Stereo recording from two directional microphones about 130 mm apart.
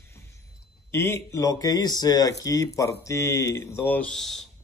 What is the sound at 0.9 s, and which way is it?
Speech, 20° left (ahead or behind).